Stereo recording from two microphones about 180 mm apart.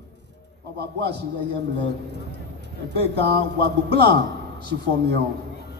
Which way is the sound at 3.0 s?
65° right (ahead or behind).